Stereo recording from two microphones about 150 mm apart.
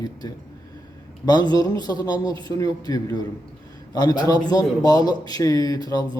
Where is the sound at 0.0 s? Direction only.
25° left (ahead or behind).